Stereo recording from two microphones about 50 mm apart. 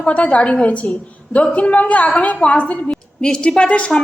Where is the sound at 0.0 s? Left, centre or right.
Left.